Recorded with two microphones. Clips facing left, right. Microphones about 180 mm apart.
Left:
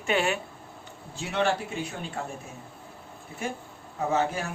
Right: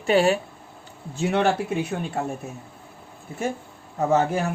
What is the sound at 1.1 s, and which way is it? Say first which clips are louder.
Speech: right 6 dB; 55° right (ahead or behind).